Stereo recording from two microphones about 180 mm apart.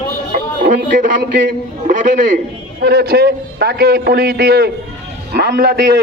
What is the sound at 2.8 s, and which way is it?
A man's voice, 60° right (ahead or behind).